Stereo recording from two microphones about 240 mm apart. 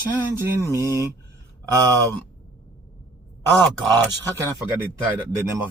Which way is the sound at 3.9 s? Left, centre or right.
Centre.